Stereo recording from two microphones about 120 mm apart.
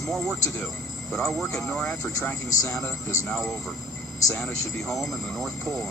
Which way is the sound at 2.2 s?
15° left (ahead or behind).